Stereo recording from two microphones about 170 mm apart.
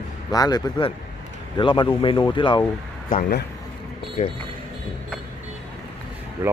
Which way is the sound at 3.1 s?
55° left (ahead or behind).